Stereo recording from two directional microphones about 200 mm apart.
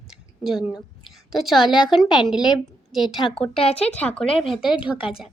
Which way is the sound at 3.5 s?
30° left (ahead or behind).